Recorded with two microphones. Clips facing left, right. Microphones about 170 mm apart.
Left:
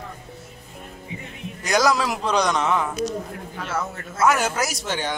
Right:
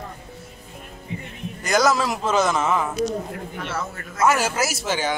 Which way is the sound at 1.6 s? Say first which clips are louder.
Right 1 dB; centre (ahead or behind).